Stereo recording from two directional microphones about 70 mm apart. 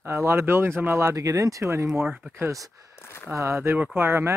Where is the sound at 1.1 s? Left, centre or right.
Right.